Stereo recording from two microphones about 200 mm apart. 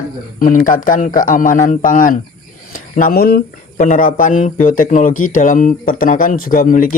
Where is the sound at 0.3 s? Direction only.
40° left (ahead or behind).